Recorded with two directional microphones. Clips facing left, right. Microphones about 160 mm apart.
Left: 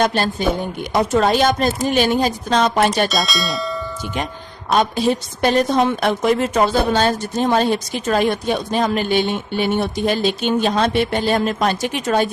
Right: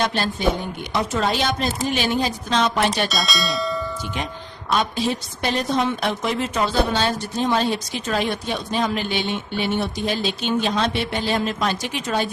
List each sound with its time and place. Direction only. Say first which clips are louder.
0.0 s a woman's voice: left 3 dB; 45° left (ahead or behind)
3.1 s speech: left 3 dB; centre (ahead or behind)
4.7 s a woman's voice: left 5 dB; 45° left (ahead or behind)